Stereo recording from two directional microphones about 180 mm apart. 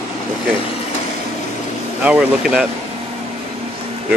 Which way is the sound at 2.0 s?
5° right (ahead or behind).